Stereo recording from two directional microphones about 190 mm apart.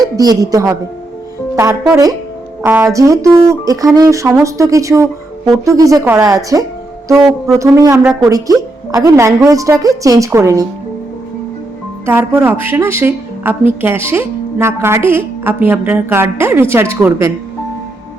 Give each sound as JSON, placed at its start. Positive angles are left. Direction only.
{"t": 0.2, "sound": "a woman's voice", "side_deg": -20}
{"t": 2.6, "sound": "a woman's voice", "side_deg": -15}
{"t": 12.0, "sound": "a woman's voice", "side_deg": -10}